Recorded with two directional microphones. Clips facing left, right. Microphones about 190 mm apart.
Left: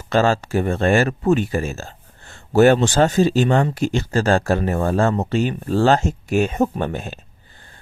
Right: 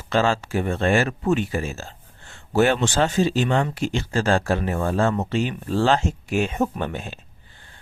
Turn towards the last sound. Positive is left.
turn(degrees=45)  # may be behind; listen again after turning